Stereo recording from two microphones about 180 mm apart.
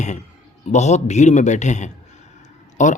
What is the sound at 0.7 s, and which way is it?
Speech, 40° left (ahead or behind).